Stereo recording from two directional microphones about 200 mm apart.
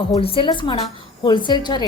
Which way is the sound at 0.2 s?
25° left (ahead or behind).